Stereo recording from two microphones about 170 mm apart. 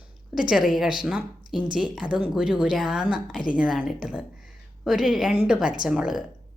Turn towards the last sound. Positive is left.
turn(degrees=-5)  # may be behind; listen again after turning